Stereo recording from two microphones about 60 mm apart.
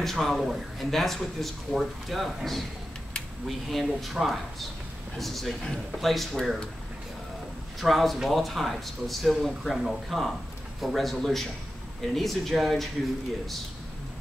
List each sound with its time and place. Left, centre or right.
0.0 s speech: centre
7.8 s speech: centre